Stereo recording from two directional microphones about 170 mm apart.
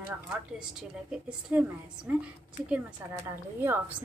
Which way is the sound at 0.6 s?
5° right (ahead or behind).